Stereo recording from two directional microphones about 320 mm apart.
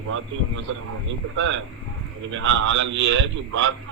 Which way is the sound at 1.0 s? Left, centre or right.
Right.